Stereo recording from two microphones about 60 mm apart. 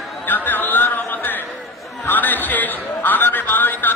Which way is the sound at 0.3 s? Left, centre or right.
Left.